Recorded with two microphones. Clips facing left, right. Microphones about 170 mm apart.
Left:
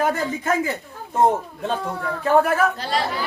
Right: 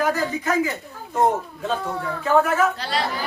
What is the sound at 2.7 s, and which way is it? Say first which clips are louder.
Speech: left 2 dB; 45° left (ahead or behind).